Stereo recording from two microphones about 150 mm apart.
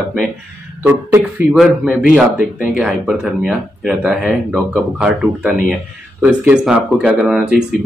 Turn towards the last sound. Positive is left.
turn(degrees=-5)  # may be behind; listen again after turning